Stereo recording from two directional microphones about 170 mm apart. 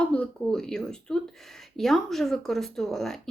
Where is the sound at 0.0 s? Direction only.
5° left (ahead or behind).